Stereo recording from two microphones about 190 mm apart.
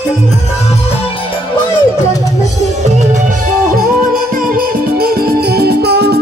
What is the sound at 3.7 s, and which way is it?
Music, 50° right (ahead or behind).